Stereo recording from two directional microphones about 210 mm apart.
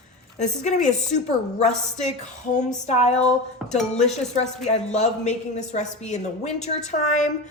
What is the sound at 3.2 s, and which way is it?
Speech, 5° left (ahead or behind).